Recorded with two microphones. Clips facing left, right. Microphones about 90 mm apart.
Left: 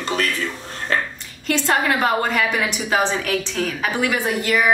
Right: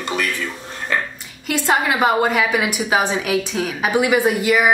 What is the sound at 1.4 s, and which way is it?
A woman's voice, 10° right (ahead or behind).